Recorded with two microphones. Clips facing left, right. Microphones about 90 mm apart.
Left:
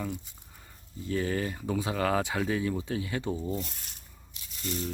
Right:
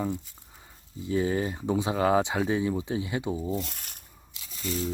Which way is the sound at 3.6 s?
60° right (ahead or behind).